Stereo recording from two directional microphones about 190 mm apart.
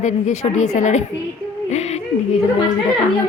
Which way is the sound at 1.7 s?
35° left (ahead or behind).